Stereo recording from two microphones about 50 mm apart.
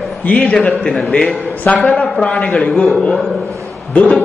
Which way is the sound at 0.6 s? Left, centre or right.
Centre.